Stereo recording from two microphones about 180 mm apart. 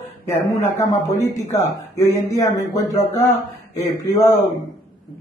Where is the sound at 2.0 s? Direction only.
20° left (ahead or behind).